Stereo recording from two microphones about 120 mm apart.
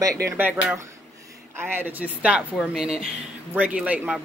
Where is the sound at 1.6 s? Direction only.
20° right (ahead or behind).